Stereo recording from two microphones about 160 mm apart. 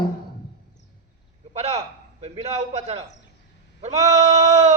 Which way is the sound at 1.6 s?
40° right (ahead or behind).